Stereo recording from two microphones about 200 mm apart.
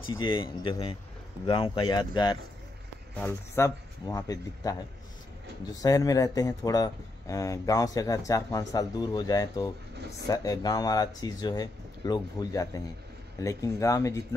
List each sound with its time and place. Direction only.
0.2 s speech: 25° left (ahead or behind)